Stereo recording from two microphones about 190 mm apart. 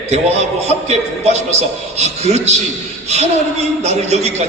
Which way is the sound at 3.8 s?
35° right (ahead or behind).